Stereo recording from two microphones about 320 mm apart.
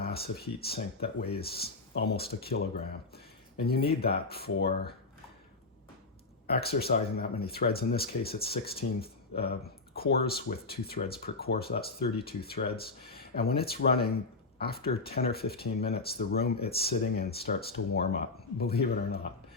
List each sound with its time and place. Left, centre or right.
0.0 s speech: left
3.8 s speech: left
6.5 s speech: left